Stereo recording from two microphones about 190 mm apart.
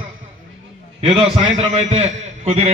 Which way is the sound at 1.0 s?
30° right (ahead or behind).